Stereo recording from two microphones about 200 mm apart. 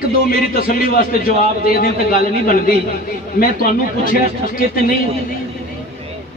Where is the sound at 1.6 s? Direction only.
45° left (ahead or behind).